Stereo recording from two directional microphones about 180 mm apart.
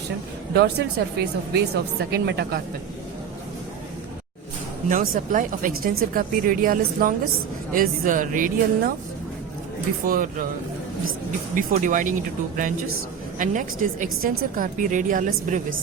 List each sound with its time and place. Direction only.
0.5 s speech: 65° right (ahead or behind)
4.9 s a woman's voice: 50° right (ahead or behind)
10.1 s a woman's voice: 50° right (ahead or behind)
11.5 s a woman's voice: 45° right (ahead or behind)
13.4 s a woman's voice: 45° right (ahead or behind)